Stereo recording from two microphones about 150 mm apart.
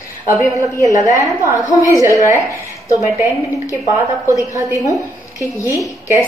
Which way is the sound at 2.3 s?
20° left (ahead or behind).